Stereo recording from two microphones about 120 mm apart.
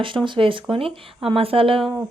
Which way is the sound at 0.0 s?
45° right (ahead or behind).